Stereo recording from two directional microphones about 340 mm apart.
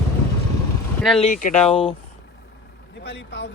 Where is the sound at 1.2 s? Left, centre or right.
Left.